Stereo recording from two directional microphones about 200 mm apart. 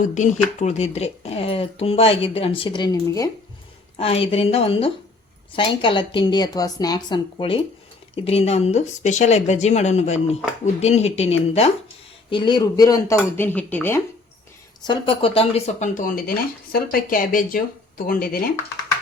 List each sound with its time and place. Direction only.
0.0 s speech: 40° left (ahead or behind); by 3.2 s 20° left (ahead or behind)
3.9 s speech: 30° left (ahead or behind); by 14.0 s 10° left (ahead or behind)
14.8 s speech: 25° left (ahead or behind); by 18.4 s 45° left (ahead or behind)